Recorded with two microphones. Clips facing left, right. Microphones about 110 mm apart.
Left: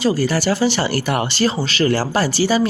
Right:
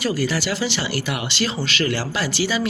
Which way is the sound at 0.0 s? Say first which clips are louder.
Left 5 dB; 30° left (ahead or behind).